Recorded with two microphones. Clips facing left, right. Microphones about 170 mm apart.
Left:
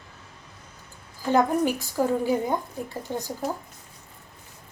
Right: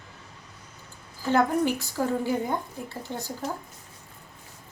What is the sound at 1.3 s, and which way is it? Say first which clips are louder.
A woman's voice: left 1 dB; 15° left (ahead or behind).